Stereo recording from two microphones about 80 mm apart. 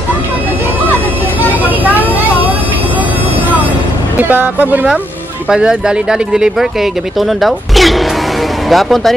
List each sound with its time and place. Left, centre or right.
4.2 s speech: right; by 9.1 s centre